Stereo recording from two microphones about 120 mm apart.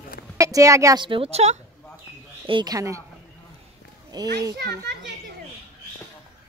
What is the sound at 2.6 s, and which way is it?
Speech, 30° right (ahead or behind).